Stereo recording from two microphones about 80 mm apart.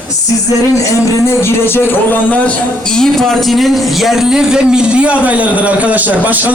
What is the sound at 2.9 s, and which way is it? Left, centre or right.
A man's voice, centre.